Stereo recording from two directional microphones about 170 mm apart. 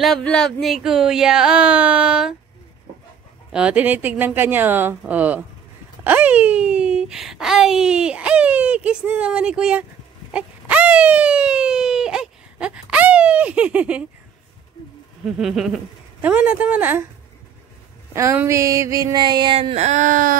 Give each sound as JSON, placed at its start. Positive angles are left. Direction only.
{"t": 0.0, "sound": "speech", "side_deg": 5}
{"t": 3.5, "sound": "speech", "side_deg": -5}
{"t": 10.3, "sound": "wail", "side_deg": -5}
{"t": 15.2, "sound": "speech", "side_deg": -5}
{"t": 18.1, "sound": "a sound", "side_deg": -15}